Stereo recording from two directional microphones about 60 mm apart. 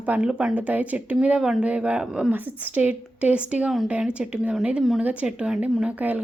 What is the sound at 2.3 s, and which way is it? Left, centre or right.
Speech, right.